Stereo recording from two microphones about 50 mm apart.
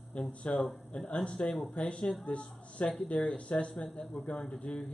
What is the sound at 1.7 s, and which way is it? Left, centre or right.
Speech, left.